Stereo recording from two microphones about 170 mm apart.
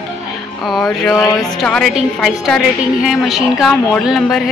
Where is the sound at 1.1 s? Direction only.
20° left (ahead or behind).